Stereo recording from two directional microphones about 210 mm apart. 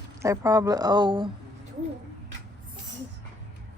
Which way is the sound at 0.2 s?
15° right (ahead or behind).